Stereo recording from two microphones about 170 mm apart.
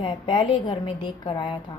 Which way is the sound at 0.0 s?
25° left (ahead or behind).